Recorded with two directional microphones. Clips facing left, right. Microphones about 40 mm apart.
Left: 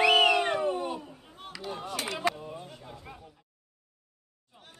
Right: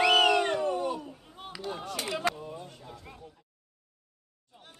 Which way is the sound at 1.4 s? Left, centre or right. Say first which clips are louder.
Even; centre.